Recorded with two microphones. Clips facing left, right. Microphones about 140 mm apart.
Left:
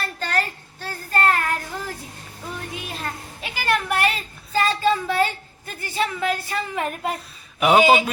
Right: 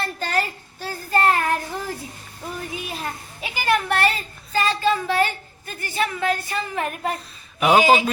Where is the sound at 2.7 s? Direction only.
10° right (ahead or behind).